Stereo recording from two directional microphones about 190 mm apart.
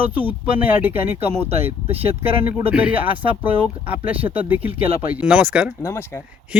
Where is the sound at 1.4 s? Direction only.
30° right (ahead or behind).